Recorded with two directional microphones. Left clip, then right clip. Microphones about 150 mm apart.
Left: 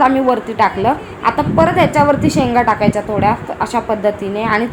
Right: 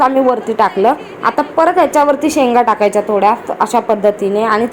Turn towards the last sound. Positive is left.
turn(degrees=-25)  # may be behind; listen again after turning